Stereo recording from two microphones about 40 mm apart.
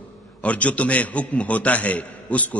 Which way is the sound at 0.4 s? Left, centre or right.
Left.